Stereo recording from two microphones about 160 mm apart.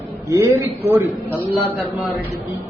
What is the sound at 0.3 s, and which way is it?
A man's voice, 20° right (ahead or behind).